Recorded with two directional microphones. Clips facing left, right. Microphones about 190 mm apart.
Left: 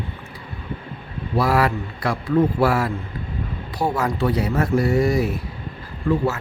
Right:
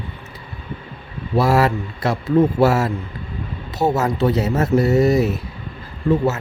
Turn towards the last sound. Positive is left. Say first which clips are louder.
# right 3 dB
turn(degrees=-20)  # may be behind; listen again after turning